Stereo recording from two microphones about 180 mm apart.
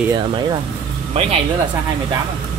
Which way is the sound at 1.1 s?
35° right (ahead or behind).